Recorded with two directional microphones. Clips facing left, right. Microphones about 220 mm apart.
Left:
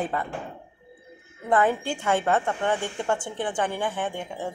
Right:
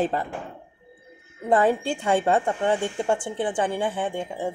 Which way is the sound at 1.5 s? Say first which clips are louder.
Right 2 dB; 25° right (ahead or behind).